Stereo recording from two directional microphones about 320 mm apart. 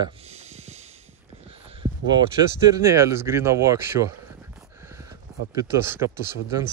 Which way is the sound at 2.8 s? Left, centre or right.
Centre.